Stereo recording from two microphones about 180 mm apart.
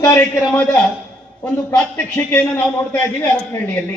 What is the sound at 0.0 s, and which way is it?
A man's voice, 10° left (ahead or behind).